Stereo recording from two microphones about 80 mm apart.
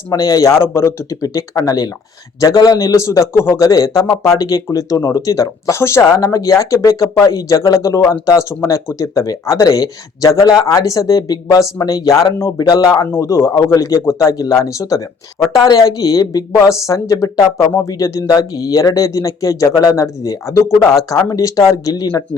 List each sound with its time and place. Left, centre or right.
0.1 s speech: left
1.2 s speech: left
13.1 s speech: left